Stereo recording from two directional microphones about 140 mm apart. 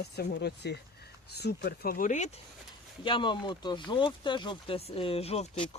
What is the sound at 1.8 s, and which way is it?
Speech, 80° left.